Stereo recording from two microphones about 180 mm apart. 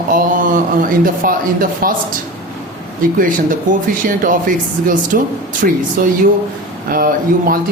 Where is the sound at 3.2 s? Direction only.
50° right (ahead or behind).